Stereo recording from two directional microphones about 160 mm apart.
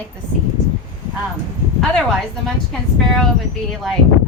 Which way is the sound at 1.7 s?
Centre (ahead or behind).